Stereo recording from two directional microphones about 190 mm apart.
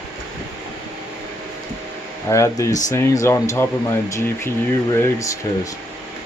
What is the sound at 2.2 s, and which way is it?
Speech, 15° left (ahead or behind).